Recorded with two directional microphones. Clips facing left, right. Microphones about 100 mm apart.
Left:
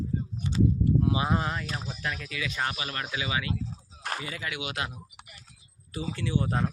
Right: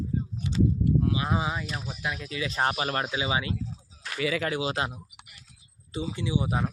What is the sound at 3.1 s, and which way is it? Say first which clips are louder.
Speech: right 3 dB; 25° right (ahead or behind).